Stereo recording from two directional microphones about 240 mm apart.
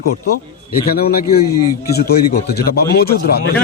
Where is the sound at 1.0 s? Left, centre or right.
Left.